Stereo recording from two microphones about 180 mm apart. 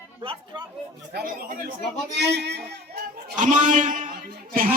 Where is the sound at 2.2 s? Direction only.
70° right (ahead or behind).